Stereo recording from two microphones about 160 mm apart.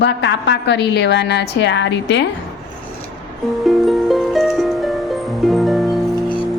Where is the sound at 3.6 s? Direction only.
Centre (ahead or behind).